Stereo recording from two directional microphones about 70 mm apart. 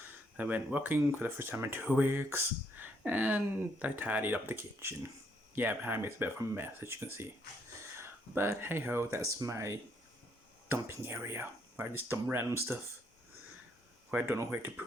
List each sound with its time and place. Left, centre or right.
0.3 s speech: right
14.1 s speech: right